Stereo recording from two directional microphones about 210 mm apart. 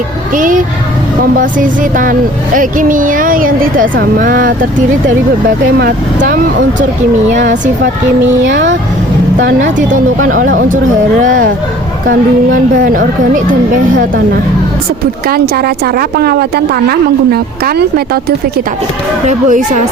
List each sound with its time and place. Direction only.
0.3 s a woman's voice: 40° right (ahead or behind)
5.8 s speech: 45° right (ahead or behind)
8.4 s speech: 60° right (ahead or behind)
9.6 s a woman's voice: 35° right (ahead or behind)
11.2 s a woman's voice: 40° right (ahead or behind)
12.7 s a woman's voice: 40° right (ahead or behind)
15.3 s speech: 45° right (ahead or behind)
19.3 s a woman's voice: 35° right (ahead or behind)